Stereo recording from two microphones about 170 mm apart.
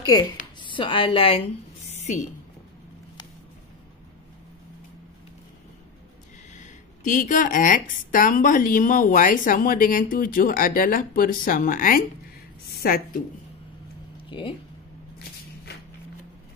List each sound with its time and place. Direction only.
0.0 s a woman's voice: 20° left (ahead or behind)
6.5 s a woman's voice: 45° left (ahead or behind)